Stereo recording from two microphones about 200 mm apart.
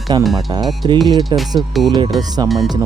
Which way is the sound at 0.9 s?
20° right (ahead or behind).